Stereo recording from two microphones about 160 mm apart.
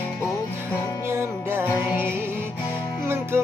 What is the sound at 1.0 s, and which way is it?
Music, 15° right (ahead or behind).